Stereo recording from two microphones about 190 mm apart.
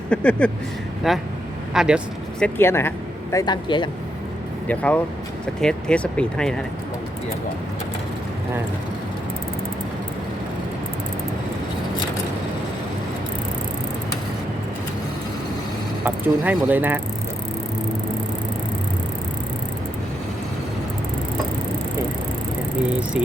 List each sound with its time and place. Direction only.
0.1 s speech: 5° left (ahead or behind)
2.4 s speech: 10° left (ahead or behind)
4.7 s speech: 10° left (ahead or behind)
16.0 s speech: 10° right (ahead or behind)
22.9 s speech: 5° right (ahead or behind)